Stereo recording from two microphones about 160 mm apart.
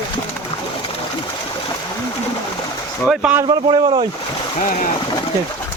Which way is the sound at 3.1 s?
5° right (ahead or behind).